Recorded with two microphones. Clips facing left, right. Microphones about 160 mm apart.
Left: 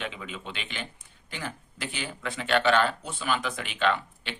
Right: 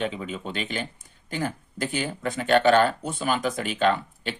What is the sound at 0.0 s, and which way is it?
Speech, 40° right (ahead or behind).